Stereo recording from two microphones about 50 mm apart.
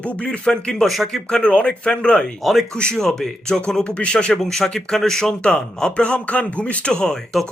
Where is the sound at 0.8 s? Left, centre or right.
Centre.